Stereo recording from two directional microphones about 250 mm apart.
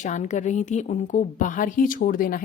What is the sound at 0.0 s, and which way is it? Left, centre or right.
A woman's voice, left.